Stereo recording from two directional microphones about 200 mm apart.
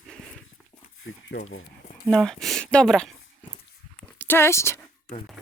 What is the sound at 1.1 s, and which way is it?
Speech, 80° left.